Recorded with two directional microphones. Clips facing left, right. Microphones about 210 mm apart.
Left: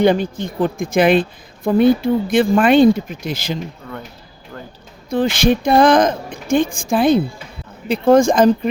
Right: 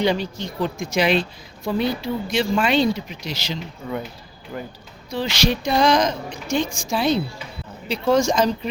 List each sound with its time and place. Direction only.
0.0 s a woman's voice: 50° left (ahead or behind)
3.8 s speech: 10° right (ahead or behind)
5.0 s a woman's voice: 50° left (ahead or behind)